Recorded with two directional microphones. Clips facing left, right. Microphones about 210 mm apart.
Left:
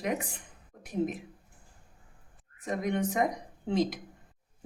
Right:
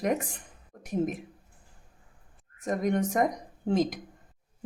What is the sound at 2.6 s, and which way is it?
Speech, 45° right (ahead or behind).